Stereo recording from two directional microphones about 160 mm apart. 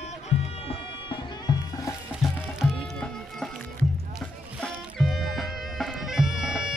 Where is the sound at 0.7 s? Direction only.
30° left (ahead or behind).